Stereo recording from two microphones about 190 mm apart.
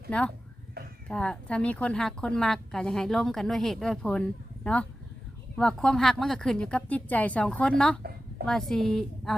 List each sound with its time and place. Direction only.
0.1 s a woman's voice: 5° left (ahead or behind)
8.0 s a sound: 50° right (ahead or behind)
8.4 s a woman's voice: centre (ahead or behind)